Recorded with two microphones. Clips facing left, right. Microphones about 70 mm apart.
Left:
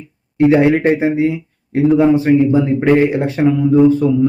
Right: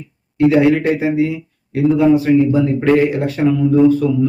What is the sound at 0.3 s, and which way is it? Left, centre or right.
A man's voice, left.